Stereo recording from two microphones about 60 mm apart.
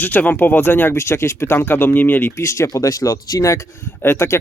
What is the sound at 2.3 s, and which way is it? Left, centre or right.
Speech, left.